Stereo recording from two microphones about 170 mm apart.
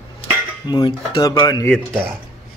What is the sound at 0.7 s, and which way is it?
Speech, 25° left (ahead or behind).